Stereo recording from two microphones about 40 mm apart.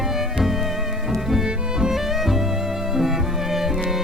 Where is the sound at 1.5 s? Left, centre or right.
Right.